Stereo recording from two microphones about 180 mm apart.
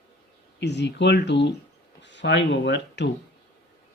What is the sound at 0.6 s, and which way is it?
Speech, 70° left (ahead or behind).